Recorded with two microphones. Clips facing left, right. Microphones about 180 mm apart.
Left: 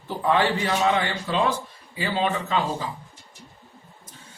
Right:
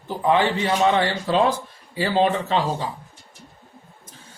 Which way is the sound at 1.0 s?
35° right (ahead or behind).